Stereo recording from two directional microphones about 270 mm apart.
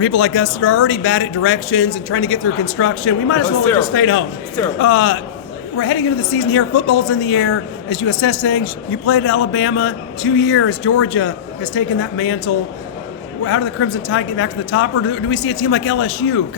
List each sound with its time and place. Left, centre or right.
0.0 s a woman's voice: left
13.4 s a woman's voice: left